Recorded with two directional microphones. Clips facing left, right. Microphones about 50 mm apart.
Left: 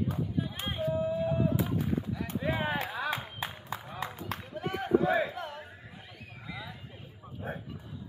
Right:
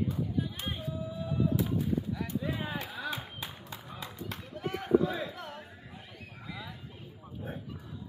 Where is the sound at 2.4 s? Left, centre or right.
Left.